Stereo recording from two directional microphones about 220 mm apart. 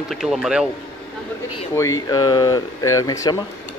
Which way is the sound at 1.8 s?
15° left (ahead or behind).